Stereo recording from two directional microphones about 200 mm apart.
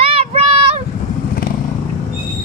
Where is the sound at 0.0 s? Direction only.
30° right (ahead or behind).